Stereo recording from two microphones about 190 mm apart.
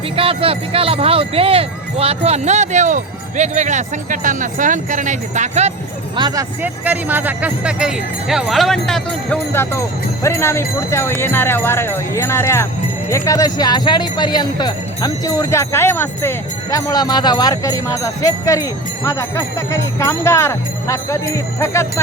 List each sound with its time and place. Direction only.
0.2 s speech: 30° right (ahead or behind)
6.1 s speech: 20° right (ahead or behind)
6.6 s speech: 10° right (ahead or behind)
9.5 s speech: 15° left (ahead or behind)